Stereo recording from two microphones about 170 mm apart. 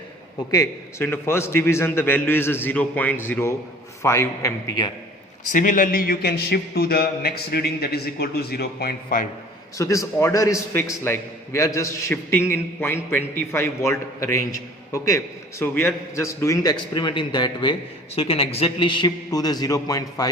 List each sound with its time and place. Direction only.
0.5 s a man's voice: 15° left (ahead or behind)
5.5 s a man's voice: 50° left (ahead or behind)
9.7 s a man's voice: 20° left (ahead or behind)